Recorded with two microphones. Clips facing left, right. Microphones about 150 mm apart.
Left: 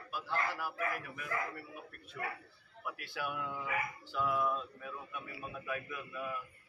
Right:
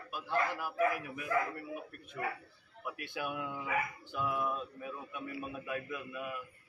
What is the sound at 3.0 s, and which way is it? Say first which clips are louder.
A man's voice: right 2 dB; 20° right (ahead or behind).